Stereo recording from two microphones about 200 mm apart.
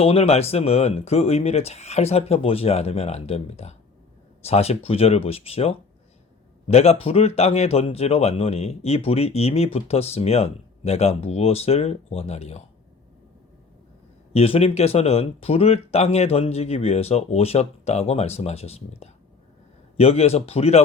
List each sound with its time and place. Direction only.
0.0 s speech: 30° left (ahead or behind)
14.3 s speech: 30° left (ahead or behind)